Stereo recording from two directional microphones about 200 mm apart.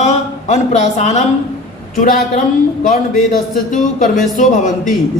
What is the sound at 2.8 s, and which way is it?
A man's voice, 40° left (ahead or behind).